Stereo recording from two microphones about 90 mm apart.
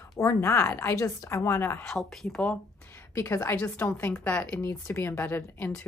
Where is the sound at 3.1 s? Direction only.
30° left (ahead or behind).